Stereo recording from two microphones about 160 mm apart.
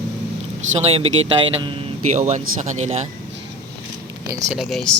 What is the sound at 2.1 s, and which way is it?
Speech, 50° right (ahead or behind).